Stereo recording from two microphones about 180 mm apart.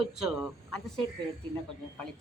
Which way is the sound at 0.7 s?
Centre (ahead or behind).